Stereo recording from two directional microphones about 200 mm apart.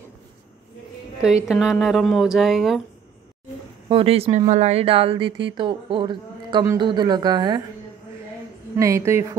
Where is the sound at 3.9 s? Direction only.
30° right (ahead or behind).